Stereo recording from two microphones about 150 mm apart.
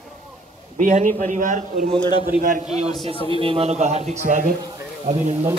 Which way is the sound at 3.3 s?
35° right (ahead or behind).